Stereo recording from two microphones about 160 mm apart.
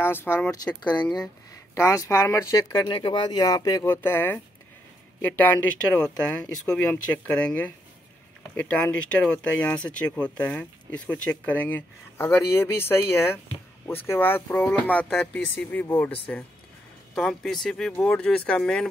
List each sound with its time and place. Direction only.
0.0 s speech: 15° left (ahead or behind)
5.4 s speech: 10° left (ahead or behind)
17.1 s speech: centre (ahead or behind)